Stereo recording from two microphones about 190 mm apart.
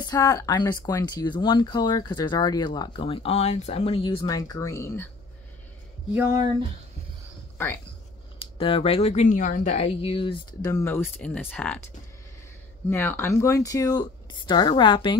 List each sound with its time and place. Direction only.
0.0 s speech: 20° left (ahead or behind)
7.5 s speech: 10° left (ahead or behind)
8.4 s speech: 30° left (ahead or behind); by 11.8 s 5° left (ahead or behind)
12.9 s speech: 10° left (ahead or behind)